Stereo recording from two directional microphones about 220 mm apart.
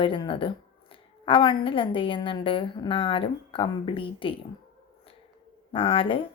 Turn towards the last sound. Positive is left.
turn(degrees=25)  # may be behind; listen again after turning